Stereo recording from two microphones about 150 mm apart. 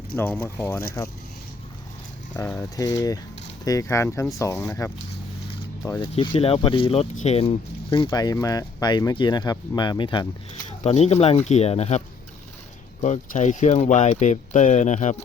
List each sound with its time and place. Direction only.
0.2 s speech: 15° left (ahead or behind)
2.4 s speech: 15° left (ahead or behind)
6.0 s speech: 35° left (ahead or behind)
10.9 s speech: 45° left (ahead or behind)